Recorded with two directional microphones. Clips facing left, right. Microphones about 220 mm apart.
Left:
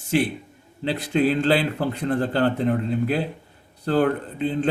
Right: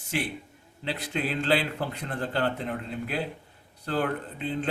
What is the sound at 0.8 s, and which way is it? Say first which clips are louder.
Speech: left 10 dB; 35° left (ahead or behind).